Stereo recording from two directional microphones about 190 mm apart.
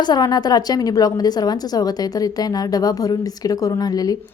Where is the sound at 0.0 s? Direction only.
20° left (ahead or behind).